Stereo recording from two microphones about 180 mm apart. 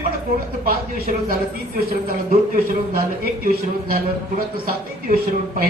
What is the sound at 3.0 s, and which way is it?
A man's voice, 55° right (ahead or behind).